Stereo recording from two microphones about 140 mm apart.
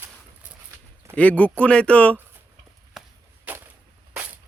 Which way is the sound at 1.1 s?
10° left (ahead or behind).